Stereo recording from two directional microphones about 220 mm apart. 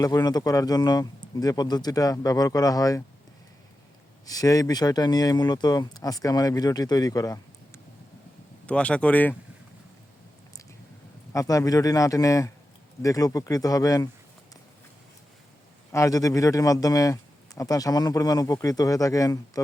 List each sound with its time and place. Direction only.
0.0 s speech: 15° left (ahead or behind)
4.3 s speech: 15° left (ahead or behind)
8.6 s speech: 5° left (ahead or behind)
11.3 s speech: 15° left (ahead or behind)
15.9 s speech: 15° left (ahead or behind)